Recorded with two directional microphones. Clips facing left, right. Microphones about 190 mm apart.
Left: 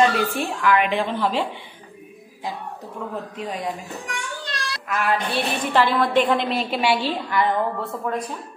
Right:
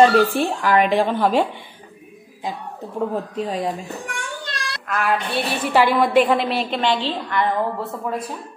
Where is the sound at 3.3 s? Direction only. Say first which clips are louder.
Right 5 dB; 35° right (ahead or behind).